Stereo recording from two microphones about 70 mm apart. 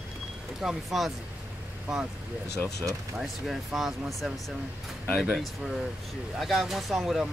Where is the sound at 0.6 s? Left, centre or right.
Centre.